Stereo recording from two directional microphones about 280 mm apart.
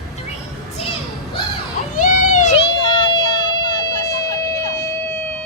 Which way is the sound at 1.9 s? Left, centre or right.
Left.